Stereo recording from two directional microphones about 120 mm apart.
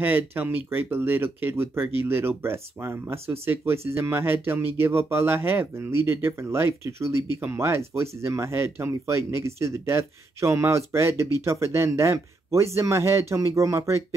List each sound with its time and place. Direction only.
0.0 s speech: 15° right (ahead or behind)